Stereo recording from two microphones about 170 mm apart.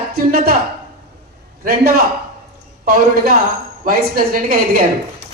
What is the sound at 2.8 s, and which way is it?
Speech, 60° right (ahead or behind).